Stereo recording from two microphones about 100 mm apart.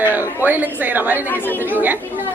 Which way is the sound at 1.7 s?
20° right (ahead or behind).